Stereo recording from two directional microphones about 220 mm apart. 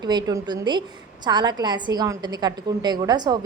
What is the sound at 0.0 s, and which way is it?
A woman's voice, 20° right (ahead or behind).